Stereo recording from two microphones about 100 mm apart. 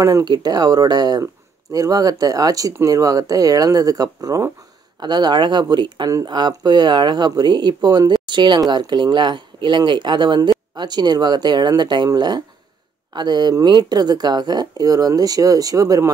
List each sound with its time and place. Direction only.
0.0 s speech: 35° right (ahead or behind)